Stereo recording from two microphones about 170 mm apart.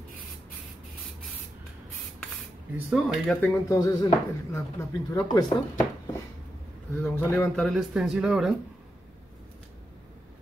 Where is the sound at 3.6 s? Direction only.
20° left (ahead or behind).